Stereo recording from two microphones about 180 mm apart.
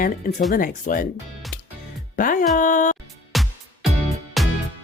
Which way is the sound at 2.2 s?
50° left (ahead or behind).